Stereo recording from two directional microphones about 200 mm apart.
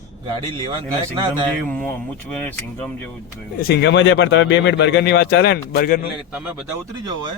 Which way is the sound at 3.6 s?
50° left (ahead or behind).